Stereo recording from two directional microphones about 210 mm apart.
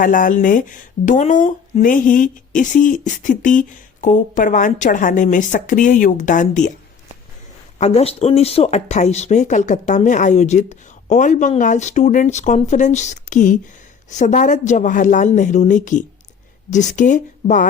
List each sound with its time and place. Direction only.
0.0 s speech: 40° left (ahead or behind)
7.8 s speech: 30° left (ahead or behind)